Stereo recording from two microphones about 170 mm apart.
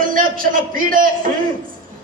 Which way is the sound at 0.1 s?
55° right (ahead or behind).